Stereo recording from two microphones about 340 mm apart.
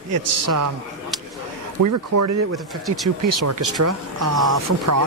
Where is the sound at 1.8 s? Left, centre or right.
Right.